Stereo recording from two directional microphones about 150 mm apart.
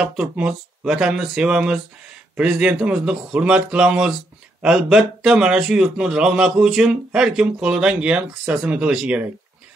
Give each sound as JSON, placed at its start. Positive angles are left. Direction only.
{"t": 0.0, "sound": "a man's voice", "side_deg": -5}